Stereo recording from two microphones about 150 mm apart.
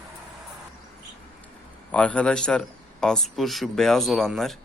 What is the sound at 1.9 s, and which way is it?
Speech, 5° left (ahead or behind).